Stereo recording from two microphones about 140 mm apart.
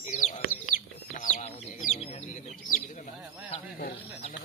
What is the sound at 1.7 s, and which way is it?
Bird, 65° left (ahead or behind).